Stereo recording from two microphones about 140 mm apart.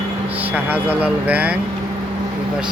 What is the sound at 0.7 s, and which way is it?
Speech, 10° right (ahead or behind).